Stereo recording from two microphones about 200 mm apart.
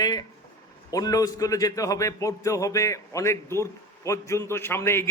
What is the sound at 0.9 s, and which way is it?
A man's voice, 20° left (ahead or behind).